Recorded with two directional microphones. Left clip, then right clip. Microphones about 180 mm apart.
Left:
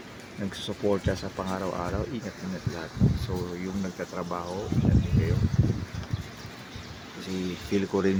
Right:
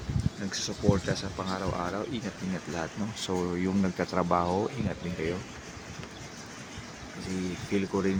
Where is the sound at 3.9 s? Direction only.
35° right (ahead or behind).